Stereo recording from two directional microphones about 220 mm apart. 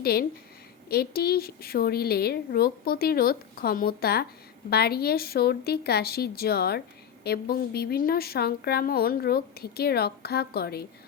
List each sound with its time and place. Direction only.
0.0 s a woman's voice: 45° left (ahead or behind)